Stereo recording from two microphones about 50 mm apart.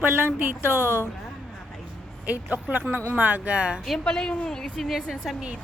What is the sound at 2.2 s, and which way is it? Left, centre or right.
Speech, right.